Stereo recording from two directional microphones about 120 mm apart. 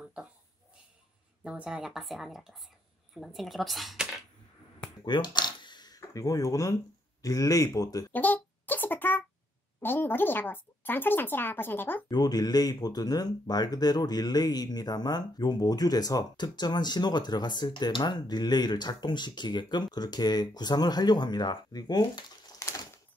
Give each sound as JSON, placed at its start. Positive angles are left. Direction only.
{"t": 0.0, "sound": "a sound", "side_deg": -10}
{"t": 1.4, "sound": "speech", "side_deg": -5}
{"t": 5.0, "sound": "speech", "side_deg": 40}
{"t": 8.1, "sound": "a sound", "side_deg": 15}
{"t": 9.8, "sound": "speech", "side_deg": 15}
{"t": 12.1, "sound": "speech", "side_deg": 35}